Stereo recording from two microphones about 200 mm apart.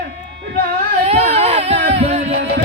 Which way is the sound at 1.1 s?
30° right (ahead or behind).